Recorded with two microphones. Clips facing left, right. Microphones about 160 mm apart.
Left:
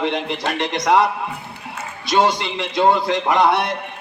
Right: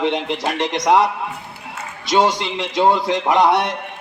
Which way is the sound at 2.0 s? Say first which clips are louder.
Right 1 dB; 15° right (ahead or behind).